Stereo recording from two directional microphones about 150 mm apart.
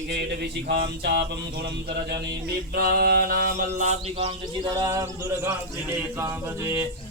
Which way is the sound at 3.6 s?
50° right (ahead or behind).